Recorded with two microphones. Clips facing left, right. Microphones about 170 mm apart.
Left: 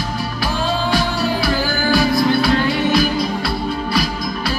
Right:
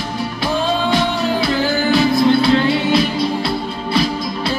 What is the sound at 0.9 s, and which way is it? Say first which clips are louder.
Music: right 2 dB; 20° right (ahead or behind).